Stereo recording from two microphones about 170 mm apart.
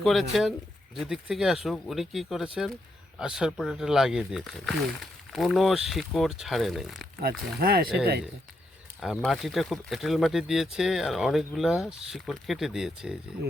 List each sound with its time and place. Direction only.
0.0 s speech: centre (ahead or behind)
7.2 s speech: 65° right (ahead or behind)
9.0 s speech: centre (ahead or behind)